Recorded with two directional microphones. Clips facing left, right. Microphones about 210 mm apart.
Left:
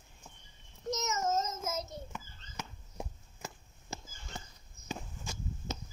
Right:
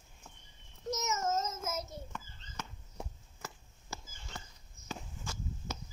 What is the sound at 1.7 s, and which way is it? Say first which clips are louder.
Child singing: left 1 dB; 5° right (ahead or behind).